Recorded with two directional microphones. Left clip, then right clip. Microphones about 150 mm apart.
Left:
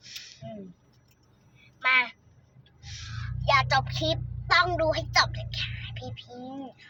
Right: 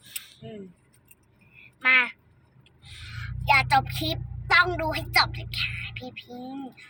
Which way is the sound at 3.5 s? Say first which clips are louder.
Right 3 dB; 20° left (ahead or behind).